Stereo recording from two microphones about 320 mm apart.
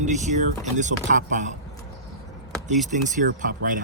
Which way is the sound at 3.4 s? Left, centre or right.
Right.